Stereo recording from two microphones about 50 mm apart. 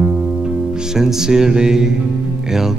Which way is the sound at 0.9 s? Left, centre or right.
Centre.